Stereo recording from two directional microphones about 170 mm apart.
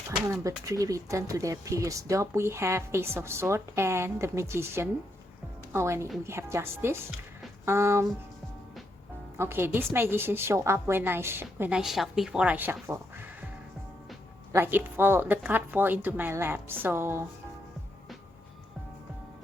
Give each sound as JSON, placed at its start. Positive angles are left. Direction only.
{"t": 0.6, "sound": "speech", "side_deg": -20}
{"t": 9.4, "sound": "speech", "side_deg": -15}
{"t": 14.5, "sound": "speech", "side_deg": -10}